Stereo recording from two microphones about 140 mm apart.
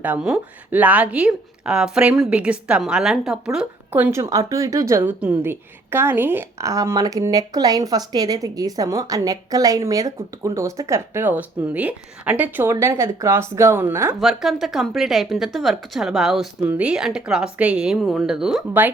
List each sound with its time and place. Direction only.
0.0 s a woman's voice: 10° right (ahead or behind)
14.2 s a woman's voice: centre (ahead or behind)